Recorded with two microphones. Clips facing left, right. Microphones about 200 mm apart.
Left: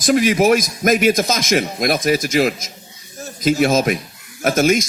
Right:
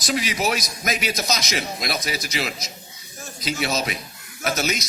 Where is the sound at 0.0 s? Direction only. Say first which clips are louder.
Left 10 dB; 50° left (ahead or behind).